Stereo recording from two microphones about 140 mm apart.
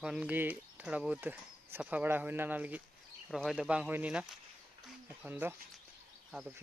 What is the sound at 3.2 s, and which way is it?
Speech, centre (ahead or behind).